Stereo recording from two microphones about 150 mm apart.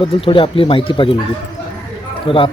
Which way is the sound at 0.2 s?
35° left (ahead or behind).